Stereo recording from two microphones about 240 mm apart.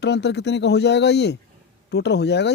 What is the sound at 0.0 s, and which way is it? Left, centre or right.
Speech, left.